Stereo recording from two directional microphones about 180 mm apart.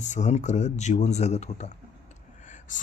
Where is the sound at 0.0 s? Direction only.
40° left (ahead or behind).